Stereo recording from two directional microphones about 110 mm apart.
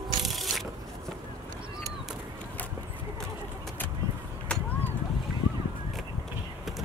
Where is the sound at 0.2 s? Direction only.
Centre (ahead or behind).